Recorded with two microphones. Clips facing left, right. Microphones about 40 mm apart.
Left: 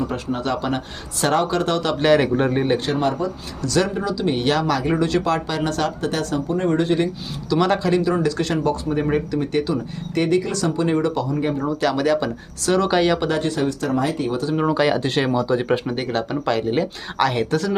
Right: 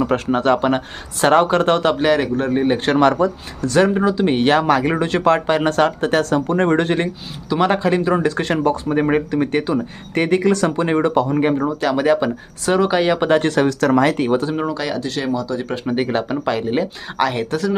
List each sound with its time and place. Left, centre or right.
0.1 s speech: right
2.0 s speech: centre
2.8 s speech: right
3.6 s speech: right
6.5 s speech: right
7.5 s speech: right
8.0 s speech: right
11.9 s speech: centre
13.1 s speech: right
13.4 s speech: right
14.3 s speech: right
14.7 s speech: centre
15.0 s speech: left
15.9 s speech: centre